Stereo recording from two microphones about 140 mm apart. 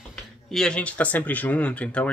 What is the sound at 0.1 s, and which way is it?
Speech, 5° left (ahead or behind).